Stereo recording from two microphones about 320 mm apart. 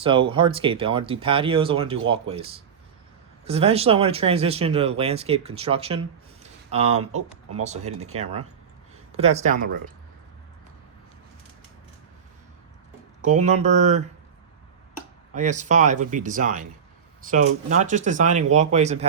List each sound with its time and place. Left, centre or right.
0.0 s speech: centre
13.2 s speech: right
15.4 s speech: right
17.7 s speech: right